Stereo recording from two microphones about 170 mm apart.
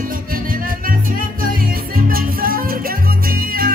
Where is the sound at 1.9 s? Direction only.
60° right (ahead or behind).